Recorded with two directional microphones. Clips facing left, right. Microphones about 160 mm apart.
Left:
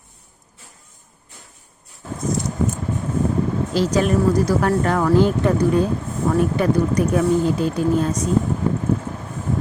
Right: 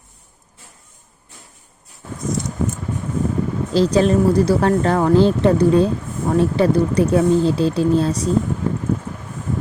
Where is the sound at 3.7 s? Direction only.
30° right (ahead or behind).